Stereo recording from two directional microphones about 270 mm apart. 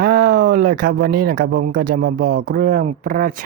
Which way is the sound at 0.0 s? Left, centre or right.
Right.